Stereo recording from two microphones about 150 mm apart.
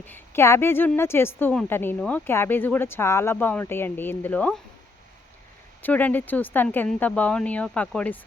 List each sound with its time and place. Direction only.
0.0 s a woman's voice: 15° left (ahead or behind)
5.8 s a woman's voice: 10° left (ahead or behind)